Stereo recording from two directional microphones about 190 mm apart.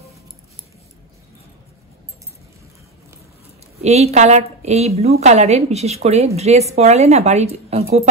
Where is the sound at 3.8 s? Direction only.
35° right (ahead or behind).